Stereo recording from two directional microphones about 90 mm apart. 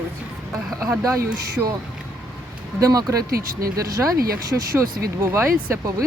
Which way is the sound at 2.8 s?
40° right (ahead or behind).